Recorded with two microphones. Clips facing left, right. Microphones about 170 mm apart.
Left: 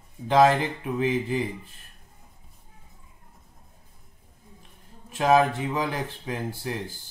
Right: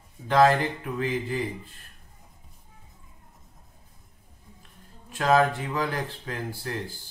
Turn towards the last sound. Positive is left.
turn(degrees=20)  # may be behind; listen again after turning